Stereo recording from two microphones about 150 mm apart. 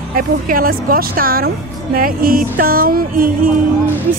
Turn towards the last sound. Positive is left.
turn(degrees=-70)  # may be behind; listen again after turning